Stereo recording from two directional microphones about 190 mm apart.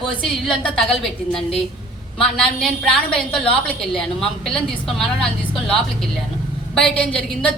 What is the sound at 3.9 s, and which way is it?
A woman's voice, centre (ahead or behind).